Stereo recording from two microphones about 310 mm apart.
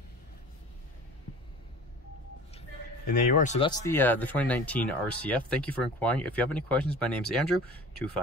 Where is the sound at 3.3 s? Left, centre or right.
Left.